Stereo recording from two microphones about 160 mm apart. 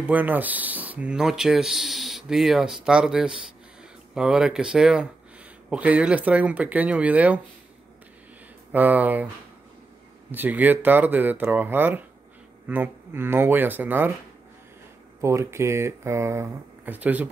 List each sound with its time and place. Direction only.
0.0 s speech: 10° right (ahead or behind)
8.7 s speech: 10° right (ahead or behind)
10.3 s speech: 10° right (ahead or behind)
15.2 s speech: 15° right (ahead or behind)